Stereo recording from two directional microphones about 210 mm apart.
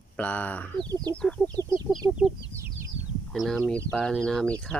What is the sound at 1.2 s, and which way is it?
Speech, 5° left (ahead or behind).